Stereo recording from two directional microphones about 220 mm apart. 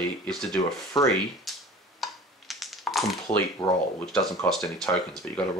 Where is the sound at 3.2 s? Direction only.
20° left (ahead or behind).